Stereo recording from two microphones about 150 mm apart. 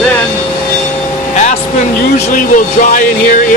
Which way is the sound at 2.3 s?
60° left (ahead or behind).